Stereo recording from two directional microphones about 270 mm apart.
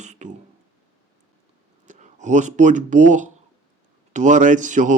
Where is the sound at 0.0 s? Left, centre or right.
Right.